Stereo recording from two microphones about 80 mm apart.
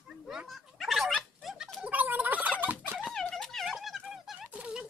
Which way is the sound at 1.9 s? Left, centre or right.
Centre.